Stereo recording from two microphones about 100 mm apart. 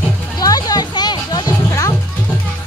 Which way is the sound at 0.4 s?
40° left (ahead or behind).